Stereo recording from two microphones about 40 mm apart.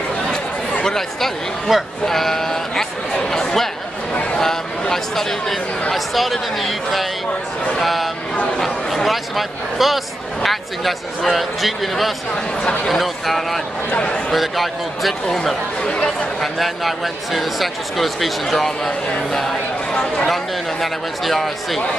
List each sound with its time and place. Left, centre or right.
0.8 s speech: centre
1.7 s speech: centre
2.0 s sheep: centre
4.1 s a sound: left
4.4 s speech: centre
13.9 s speech: left
14.3 s speech: centre
15.8 s speech: left
16.3 s speech: centre